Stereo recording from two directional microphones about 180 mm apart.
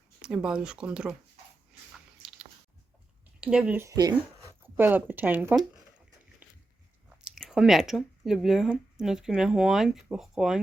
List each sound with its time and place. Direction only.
0.2 s speech: 5° right (ahead or behind)
3.4 s speech: 5° right (ahead or behind); by 4.2 s 20° right (ahead or behind)
4.6 s speech: 10° right (ahead or behind)
6.4 s a sound: 10° right (ahead or behind)
7.3 s speech: centre (ahead or behind)